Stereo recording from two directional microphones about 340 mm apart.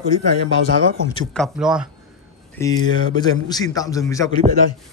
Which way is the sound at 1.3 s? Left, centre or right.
Centre.